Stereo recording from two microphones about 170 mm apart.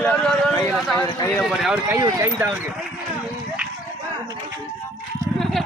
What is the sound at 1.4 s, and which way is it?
Speech, centre (ahead or behind).